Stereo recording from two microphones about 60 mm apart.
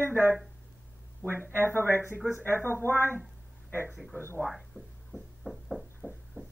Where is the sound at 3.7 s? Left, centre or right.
Left.